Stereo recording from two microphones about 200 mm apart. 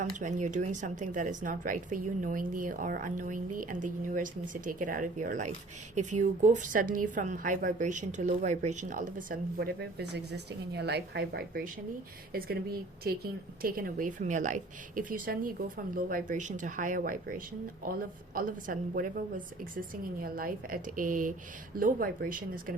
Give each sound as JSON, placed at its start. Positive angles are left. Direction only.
{"t": 0.0, "sound": "a woman's voice", "side_deg": -40}
{"t": 20.2, "sound": "a woman's voice", "side_deg": -45}